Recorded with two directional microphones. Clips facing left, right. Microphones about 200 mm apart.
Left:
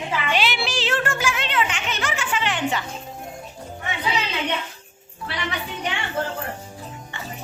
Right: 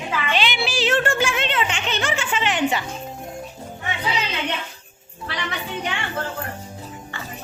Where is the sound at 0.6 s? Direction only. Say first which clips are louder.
Right 3 dB; 10° right (ahead or behind).